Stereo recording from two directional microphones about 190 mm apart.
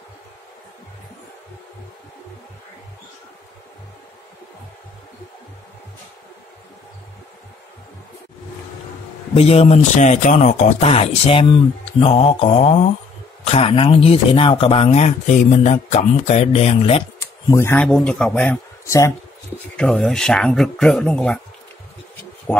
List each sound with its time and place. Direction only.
9.3 s speech: 30° left (ahead or behind)
17.5 s a man's voice: 15° left (ahead or behind)